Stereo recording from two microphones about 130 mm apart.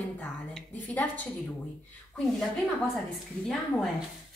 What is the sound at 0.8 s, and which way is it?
Speech, 10° left (ahead or behind).